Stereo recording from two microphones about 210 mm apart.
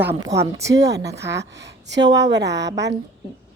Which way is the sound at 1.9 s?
55° right (ahead or behind).